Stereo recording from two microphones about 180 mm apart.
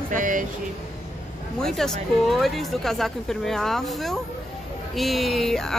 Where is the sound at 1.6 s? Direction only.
5° left (ahead or behind).